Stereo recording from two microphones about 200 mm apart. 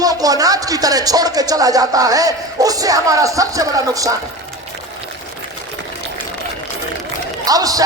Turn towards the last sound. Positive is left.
turn(degrees=-20)  # may be behind; listen again after turning